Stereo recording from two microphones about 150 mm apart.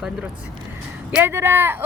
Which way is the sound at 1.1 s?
15° right (ahead or behind).